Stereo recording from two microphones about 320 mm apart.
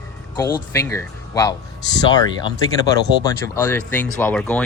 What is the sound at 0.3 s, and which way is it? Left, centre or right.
Speech, centre.